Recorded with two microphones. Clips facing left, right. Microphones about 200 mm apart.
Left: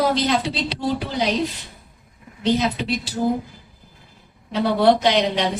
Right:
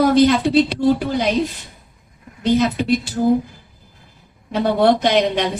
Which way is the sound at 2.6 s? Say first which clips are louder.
Right 6 dB; 50° right (ahead or behind).